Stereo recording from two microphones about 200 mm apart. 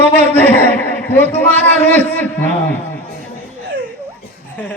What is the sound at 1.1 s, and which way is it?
A woman's voice, 10° left (ahead or behind).